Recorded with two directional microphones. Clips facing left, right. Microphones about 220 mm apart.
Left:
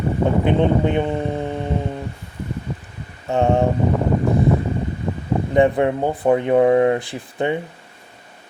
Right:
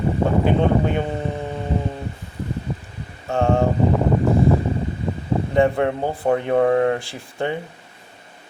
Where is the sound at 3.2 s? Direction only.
20° left (ahead or behind).